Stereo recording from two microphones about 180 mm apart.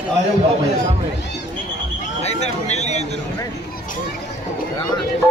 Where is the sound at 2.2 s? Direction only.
35° left (ahead or behind).